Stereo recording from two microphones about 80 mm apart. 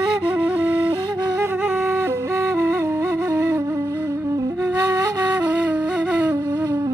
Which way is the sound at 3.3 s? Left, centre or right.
Right.